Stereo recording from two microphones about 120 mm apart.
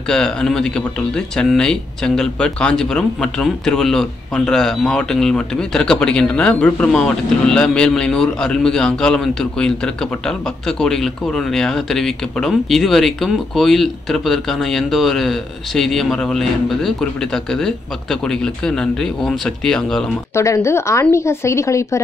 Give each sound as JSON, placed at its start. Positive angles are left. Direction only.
{"t": 0.1, "sound": "speech", "side_deg": 5}
{"t": 20.3, "sound": "a woman's voice", "side_deg": 25}